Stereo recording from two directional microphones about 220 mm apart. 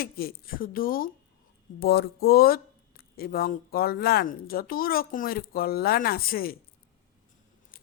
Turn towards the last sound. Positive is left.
turn(degrees=45)  # may be behind; listen again after turning